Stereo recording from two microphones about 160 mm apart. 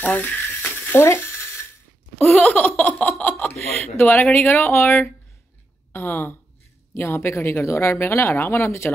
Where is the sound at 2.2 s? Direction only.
10° left (ahead or behind).